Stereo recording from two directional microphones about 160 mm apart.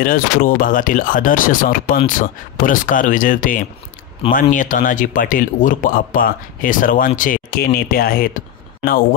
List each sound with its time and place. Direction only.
0.0 s speech: 60° left (ahead or behind)